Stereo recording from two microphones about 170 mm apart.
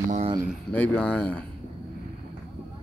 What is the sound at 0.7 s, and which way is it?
Speech, 10° left (ahead or behind).